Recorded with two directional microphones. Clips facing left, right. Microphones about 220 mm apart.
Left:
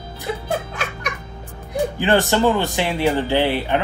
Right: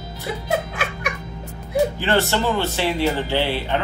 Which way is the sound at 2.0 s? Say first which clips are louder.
Left 4 dB; 15° left (ahead or behind).